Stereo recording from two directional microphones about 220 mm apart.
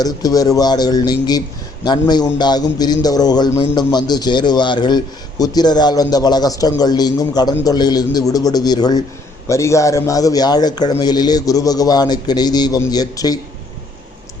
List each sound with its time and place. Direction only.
0.0 s a man's voice: 15° left (ahead or behind)